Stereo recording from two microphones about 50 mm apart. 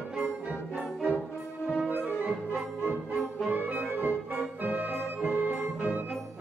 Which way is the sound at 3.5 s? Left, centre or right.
Right.